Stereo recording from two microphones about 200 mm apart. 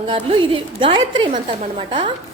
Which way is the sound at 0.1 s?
25° right (ahead or behind).